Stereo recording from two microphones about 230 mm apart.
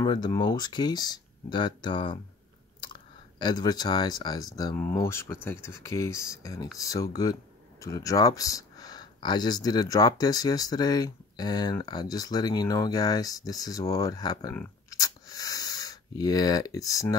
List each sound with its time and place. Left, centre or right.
0.0 s speech: centre